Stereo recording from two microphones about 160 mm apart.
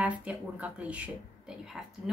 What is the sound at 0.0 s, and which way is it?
Speech, 10° right (ahead or behind).